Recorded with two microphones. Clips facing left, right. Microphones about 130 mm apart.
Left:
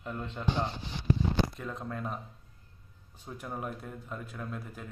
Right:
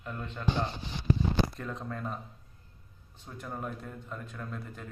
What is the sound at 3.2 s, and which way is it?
A man's voice, 10° left (ahead or behind).